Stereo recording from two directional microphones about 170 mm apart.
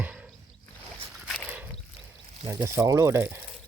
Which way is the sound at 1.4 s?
10° right (ahead or behind).